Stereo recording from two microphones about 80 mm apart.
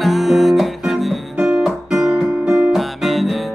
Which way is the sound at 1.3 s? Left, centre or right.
Centre.